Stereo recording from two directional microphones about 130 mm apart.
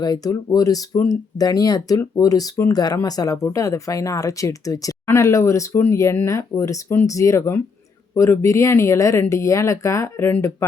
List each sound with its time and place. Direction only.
0.0 s speech: 30° left (ahead or behind)